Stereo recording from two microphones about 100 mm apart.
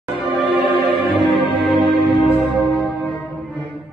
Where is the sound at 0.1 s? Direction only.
60° right (ahead or behind).